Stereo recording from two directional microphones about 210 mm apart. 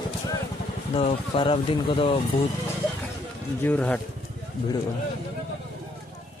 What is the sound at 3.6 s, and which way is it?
Speech, 5° left (ahead or behind).